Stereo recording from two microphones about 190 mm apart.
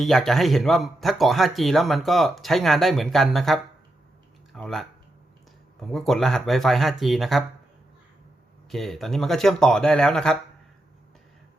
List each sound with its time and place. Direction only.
0.0 s speech: centre (ahead or behind)
5.9 s speech: centre (ahead or behind)
8.7 s speech: centre (ahead or behind)